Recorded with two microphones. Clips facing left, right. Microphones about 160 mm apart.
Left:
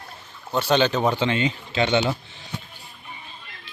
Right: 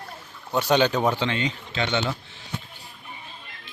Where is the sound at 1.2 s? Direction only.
5° left (ahead or behind).